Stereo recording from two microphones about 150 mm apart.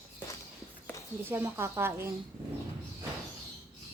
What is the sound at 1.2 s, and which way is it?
Speech, 15° right (ahead or behind).